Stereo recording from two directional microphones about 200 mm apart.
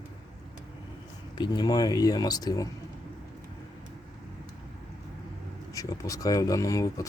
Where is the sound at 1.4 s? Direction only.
20° left (ahead or behind).